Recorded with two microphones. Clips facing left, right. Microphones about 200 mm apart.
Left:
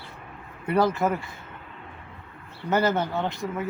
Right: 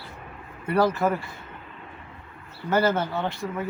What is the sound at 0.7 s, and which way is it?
Speech, 20° left (ahead or behind).